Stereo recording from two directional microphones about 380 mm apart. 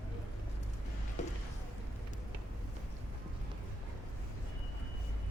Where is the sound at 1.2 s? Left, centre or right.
Centre.